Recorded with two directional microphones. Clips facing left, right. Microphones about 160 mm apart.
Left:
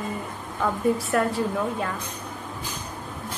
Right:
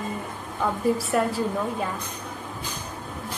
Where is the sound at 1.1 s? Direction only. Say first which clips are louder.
Even; centre (ahead or behind).